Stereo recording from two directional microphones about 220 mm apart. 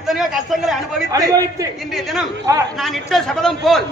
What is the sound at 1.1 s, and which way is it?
Speech, 15° right (ahead or behind).